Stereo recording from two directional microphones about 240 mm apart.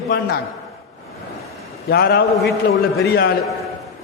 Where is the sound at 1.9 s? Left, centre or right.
Left.